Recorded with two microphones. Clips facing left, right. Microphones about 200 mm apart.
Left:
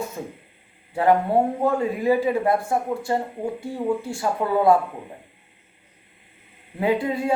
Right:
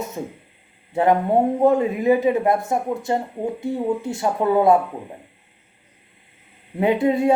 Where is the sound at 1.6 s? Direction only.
20° right (ahead or behind).